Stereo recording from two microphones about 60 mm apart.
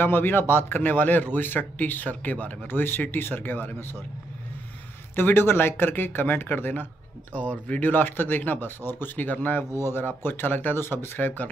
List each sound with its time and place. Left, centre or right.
0.0 s a man's voice: left
5.1 s a man's voice: left